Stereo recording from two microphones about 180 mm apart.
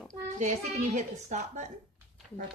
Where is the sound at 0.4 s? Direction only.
40° right (ahead or behind).